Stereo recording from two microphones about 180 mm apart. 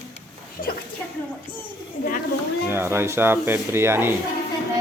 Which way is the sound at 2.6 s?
15° right (ahead or behind).